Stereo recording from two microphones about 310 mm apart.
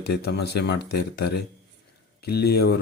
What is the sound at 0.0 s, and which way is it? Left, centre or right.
Speech, left.